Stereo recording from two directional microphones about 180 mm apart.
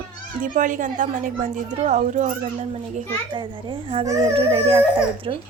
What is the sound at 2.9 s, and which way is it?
A child's voice, 30° right (ahead or behind).